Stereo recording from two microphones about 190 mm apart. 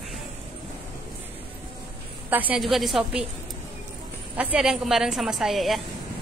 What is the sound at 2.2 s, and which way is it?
A woman's voice, 10° right (ahead or behind).